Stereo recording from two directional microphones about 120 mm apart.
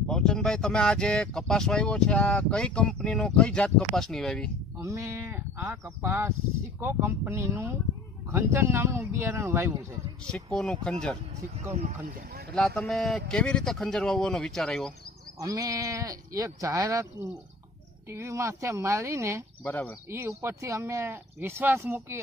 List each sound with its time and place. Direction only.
0.1 s speech: 5° left (ahead or behind)
4.7 s speech: 25° right (ahead or behind)
10.2 s speech: 5° left (ahead or behind)
12.5 s a man's voice: 5° left (ahead or behind)
15.3 s speech: 30° right (ahead or behind)
18.1 s speech: 25° right (ahead or behind)
19.6 s speech: 15° left (ahead or behind)
20.1 s speech: 20° right (ahead or behind)